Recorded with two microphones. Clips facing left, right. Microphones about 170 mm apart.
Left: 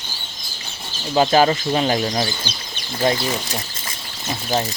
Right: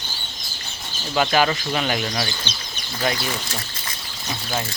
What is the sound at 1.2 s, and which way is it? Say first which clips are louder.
Speech: left 4 dB; 30° left (ahead or behind).